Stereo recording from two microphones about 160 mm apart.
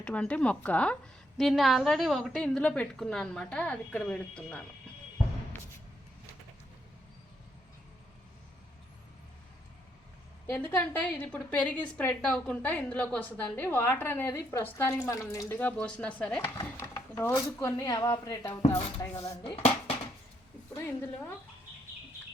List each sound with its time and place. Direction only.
0.0 s a woman's voice: 5° left (ahead or behind)
10.5 s a woman's voice: 10° left (ahead or behind)
16.6 s a sound: 20° left (ahead or behind)
17.6 s a woman's voice: 20° left (ahead or behind)
20.7 s a woman's voice: 15° left (ahead or behind)